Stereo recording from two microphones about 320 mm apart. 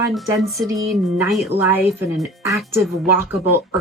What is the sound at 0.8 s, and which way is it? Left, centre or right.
Speech, centre.